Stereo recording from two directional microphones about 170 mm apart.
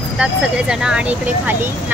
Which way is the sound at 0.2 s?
5° right (ahead or behind).